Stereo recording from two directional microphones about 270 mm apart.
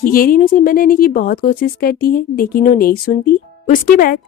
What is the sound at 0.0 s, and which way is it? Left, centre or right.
A woman's voice, left.